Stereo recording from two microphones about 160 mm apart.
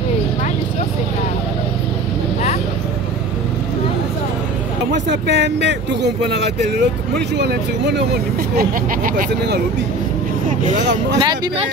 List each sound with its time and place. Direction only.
4.9 s speech: 90° right
11.1 s speech: 30° right (ahead or behind)